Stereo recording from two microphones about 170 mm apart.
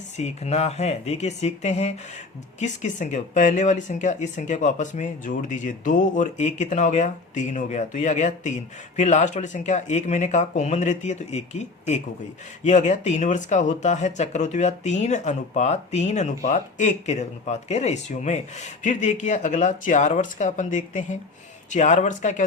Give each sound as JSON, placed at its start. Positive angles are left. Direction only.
{"t": 0.2, "sound": "speech", "side_deg": 40}